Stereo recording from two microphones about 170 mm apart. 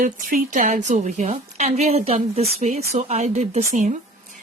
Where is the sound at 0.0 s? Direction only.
50° right (ahead or behind).